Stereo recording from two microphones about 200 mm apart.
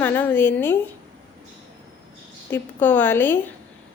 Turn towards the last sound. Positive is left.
turn(degrees=10)  # may be behind; listen again after turning